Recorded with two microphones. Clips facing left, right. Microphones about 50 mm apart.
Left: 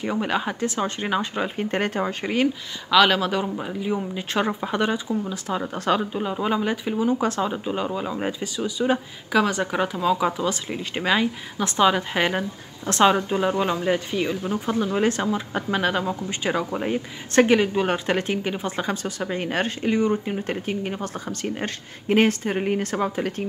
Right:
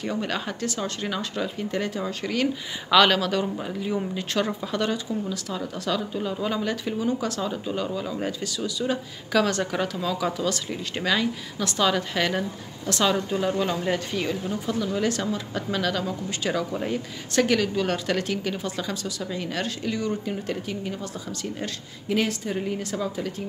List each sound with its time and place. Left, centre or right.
0.0 s speech: centre
1.6 s speech: left
2.0 s speech: left
2.9 s speech: centre
3.2 s speech: centre; by 6.2 s left
6.2 s speech: left
7.2 s speech: left; by 14.3 s centre
14.5 s speech: left